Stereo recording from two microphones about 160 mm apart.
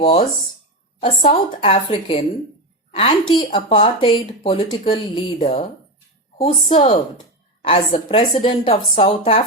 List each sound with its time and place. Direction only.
0.0 s speech: 35° left (ahead or behind)
6.7 s speech: 30° left (ahead or behind)